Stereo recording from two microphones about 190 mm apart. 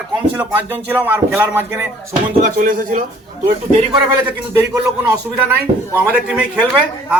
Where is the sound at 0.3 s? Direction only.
10° right (ahead or behind).